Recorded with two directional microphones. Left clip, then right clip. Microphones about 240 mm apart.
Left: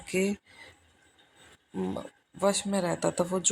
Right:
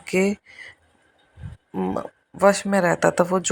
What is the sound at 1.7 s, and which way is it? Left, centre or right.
Speech, right.